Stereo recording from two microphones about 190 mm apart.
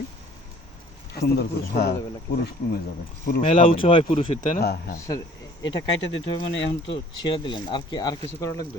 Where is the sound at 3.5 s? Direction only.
30° left (ahead or behind).